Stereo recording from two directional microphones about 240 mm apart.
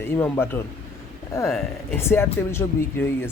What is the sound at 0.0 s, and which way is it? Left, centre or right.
Speech, centre.